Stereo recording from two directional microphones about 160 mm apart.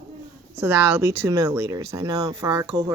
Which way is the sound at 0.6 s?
15° right (ahead or behind).